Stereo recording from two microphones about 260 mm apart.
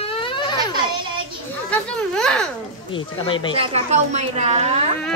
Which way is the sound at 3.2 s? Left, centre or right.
Centre.